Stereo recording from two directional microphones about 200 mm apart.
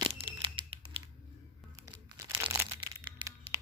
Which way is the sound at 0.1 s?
25° right (ahead or behind).